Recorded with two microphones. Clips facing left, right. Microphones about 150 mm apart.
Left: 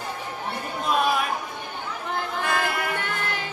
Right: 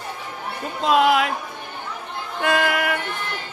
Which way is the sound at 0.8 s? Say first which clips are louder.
Right 6 dB; 85° right.